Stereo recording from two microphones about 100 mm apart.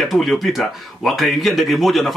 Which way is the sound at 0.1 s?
Centre (ahead or behind).